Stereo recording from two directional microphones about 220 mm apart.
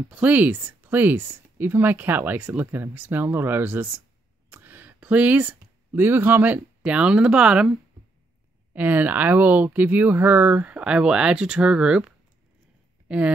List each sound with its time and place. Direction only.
0.1 s speech: 5° right (ahead or behind)
8.7 s speech: 10° right (ahead or behind)
13.1 s speech: 5° right (ahead or behind)